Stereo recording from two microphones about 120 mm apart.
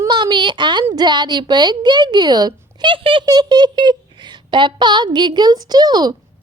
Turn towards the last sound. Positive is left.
turn(degrees=-35)  # may be behind; listen again after turning